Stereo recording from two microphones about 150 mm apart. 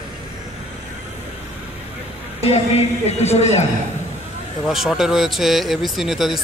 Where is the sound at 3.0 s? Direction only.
45° left (ahead or behind).